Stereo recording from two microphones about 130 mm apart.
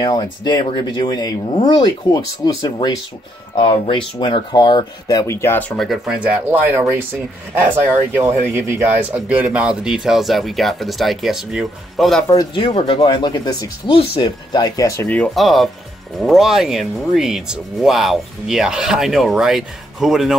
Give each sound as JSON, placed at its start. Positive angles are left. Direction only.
{"t": 0.0, "sound": "speech", "side_deg": 35}
{"t": 3.9, "sound": "speech", "side_deg": 40}
{"t": 12.5, "sound": "speech", "side_deg": 45}
{"t": 15.0, "sound": "speech", "side_deg": 10}